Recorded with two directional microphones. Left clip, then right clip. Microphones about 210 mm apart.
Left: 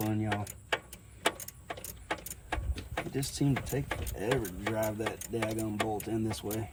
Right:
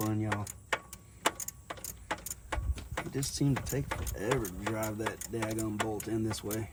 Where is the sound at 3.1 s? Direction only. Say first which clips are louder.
Even; 30° right (ahead or behind).